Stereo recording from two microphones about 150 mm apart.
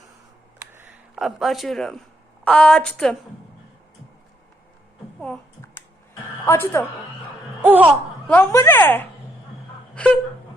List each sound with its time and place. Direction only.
1.1 s speech: centre (ahead or behind)
6.4 s a woman's voice: 15° left (ahead or behind)
7.6 s laughter: 10° right (ahead or behind)
8.3 s speech: 15° left (ahead or behind)
9.9 s a sound: 10° left (ahead or behind)